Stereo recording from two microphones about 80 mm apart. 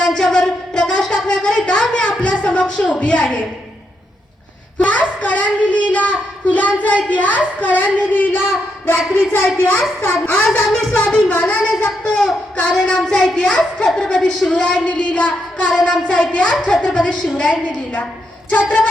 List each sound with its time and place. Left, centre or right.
0.0 s music: centre
4.8 s speech: centre
10.7 s speech: centre
12.1 s speech: centre